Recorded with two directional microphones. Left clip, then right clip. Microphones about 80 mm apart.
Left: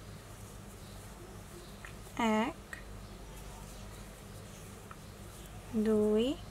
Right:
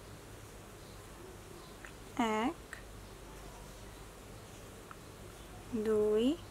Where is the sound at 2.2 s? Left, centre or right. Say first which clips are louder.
Left 2 dB; centre.